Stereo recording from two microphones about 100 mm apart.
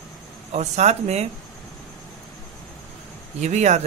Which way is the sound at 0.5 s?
90° right.